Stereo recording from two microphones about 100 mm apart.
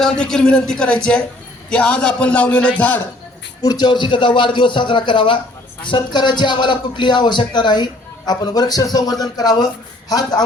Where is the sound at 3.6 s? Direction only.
45° left (ahead or behind).